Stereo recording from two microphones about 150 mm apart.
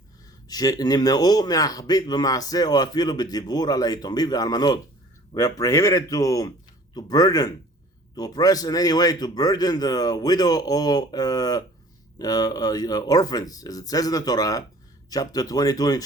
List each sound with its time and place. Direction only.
0.4 s speech: 25° left (ahead or behind)